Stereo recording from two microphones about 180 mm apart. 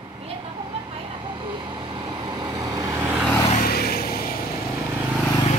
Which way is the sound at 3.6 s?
60° left (ahead or behind).